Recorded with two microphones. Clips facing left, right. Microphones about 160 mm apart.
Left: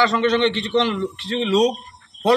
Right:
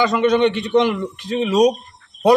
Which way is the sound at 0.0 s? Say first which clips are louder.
Right 2 dB; 15° right (ahead or behind).